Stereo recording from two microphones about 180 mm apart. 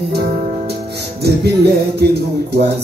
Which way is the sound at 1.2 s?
65° right (ahead or behind).